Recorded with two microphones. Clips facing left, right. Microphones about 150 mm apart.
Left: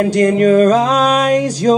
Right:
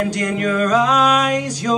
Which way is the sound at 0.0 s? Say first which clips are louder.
Left 9 dB; 35° left (ahead or behind).